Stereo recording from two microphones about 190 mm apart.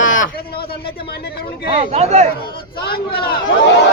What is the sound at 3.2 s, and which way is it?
Speech, 55° left (ahead or behind).